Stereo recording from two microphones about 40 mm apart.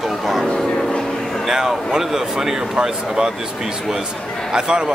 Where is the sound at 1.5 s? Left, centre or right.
Centre.